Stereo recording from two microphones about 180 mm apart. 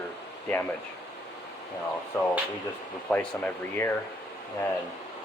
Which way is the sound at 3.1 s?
10° left (ahead or behind).